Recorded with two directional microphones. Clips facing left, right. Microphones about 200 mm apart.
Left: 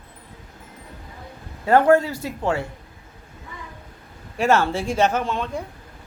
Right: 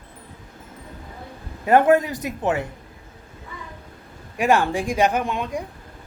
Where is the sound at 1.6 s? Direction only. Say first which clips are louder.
Even; 20° right (ahead or behind).